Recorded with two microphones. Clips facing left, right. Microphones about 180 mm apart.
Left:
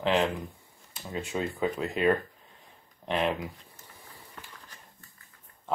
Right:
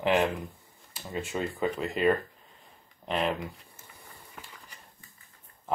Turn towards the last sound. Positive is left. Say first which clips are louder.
# even
turn(degrees=-5)  # may be behind; listen again after turning